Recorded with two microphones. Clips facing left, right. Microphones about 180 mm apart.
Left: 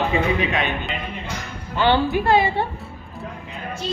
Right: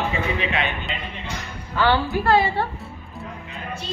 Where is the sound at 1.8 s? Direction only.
20° left (ahead or behind).